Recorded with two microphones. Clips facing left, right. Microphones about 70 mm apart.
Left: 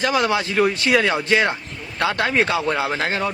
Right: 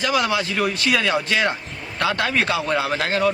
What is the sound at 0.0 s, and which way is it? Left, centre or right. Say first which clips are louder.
A man's voice: left 1 dB; left.